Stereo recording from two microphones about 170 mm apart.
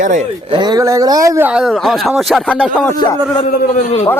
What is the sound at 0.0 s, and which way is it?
Speech, 50° right (ahead or behind).